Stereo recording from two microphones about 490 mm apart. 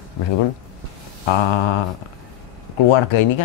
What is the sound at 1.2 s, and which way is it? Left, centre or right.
Speech, left.